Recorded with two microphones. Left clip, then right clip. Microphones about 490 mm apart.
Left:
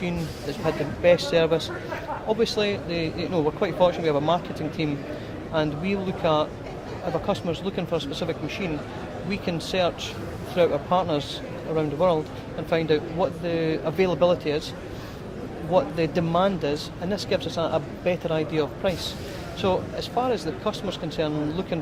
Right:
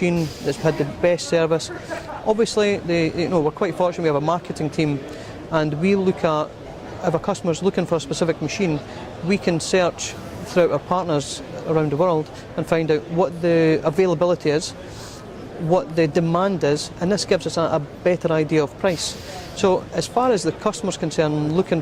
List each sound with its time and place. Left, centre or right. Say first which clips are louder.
0.6 s speech: right 2 dB; right
15.7 s speech: right 4 dB; right